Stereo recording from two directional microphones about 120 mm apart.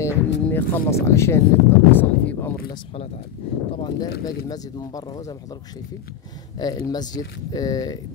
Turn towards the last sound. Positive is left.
turn(degrees=30)  # may be behind; listen again after turning